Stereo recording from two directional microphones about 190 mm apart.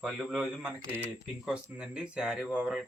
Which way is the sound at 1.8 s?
5° right (ahead or behind).